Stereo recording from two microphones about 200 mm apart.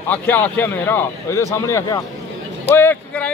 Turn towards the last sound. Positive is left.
turn(degrees=10)  # may be behind; listen again after turning